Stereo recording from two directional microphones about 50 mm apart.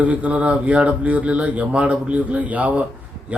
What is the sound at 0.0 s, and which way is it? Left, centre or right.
A man's voice, right.